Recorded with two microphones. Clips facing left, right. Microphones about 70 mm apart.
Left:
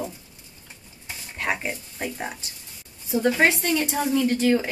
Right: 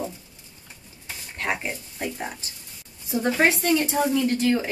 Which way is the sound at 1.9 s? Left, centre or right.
Centre.